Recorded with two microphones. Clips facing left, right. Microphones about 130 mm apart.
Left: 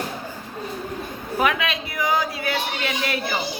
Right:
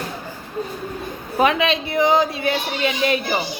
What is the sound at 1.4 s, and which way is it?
Speech, 25° right (ahead or behind).